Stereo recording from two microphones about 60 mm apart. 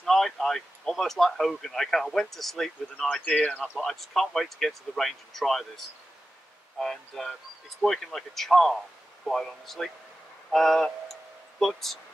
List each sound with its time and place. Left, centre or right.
0.0 s speech: centre
3.1 s speech: left
3.6 s speech: centre